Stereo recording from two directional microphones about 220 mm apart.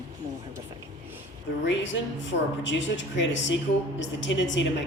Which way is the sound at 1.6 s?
55° left (ahead or behind).